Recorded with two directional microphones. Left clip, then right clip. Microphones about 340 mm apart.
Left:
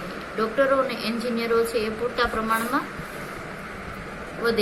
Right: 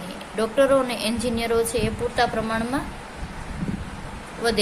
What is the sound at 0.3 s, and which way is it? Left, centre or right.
A woman's voice, right.